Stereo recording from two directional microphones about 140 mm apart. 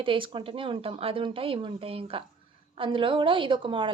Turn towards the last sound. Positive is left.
turn(degrees=-35)  # may be behind; listen again after turning